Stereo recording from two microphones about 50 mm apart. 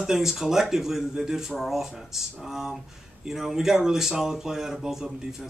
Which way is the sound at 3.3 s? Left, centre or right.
Centre.